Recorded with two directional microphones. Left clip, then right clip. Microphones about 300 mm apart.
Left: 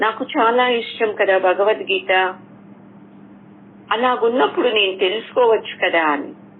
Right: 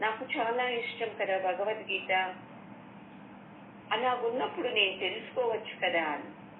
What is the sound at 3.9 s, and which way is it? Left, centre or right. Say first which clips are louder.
A woman's voice: left 13 dB; left.